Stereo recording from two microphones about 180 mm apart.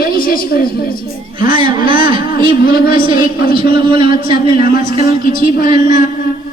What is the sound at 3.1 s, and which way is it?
Speech, 55° left (ahead or behind).